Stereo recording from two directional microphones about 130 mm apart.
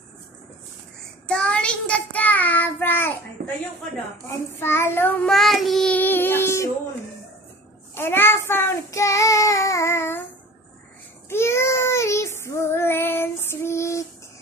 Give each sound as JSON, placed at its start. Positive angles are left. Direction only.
{"t": 1.2, "sound": "child singing", "side_deg": 5}
{"t": 4.6, "sound": "child singing", "side_deg": 20}
{"t": 5.3, "sound": "child singing", "side_deg": 0}
{"t": 7.9, "sound": "child singing", "side_deg": 15}
{"t": 11.2, "sound": "child singing", "side_deg": 20}